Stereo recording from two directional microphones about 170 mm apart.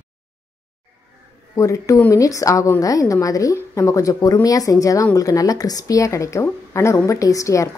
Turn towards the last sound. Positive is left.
turn(degrees=20)  # may be behind; listen again after turning